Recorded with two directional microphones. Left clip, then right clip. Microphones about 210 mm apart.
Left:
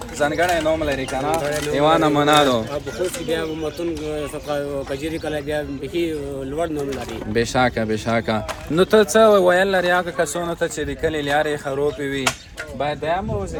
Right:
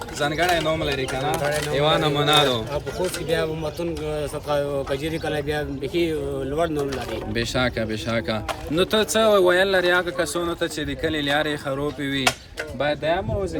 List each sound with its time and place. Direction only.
0.2 s speech: 5° left (ahead or behind)
1.7 s speech: 20° left (ahead or behind)
3.2 s speech: 10° right (ahead or behind)
7.3 s speech: 20° left (ahead or behind); by 13.2 s centre (ahead or behind)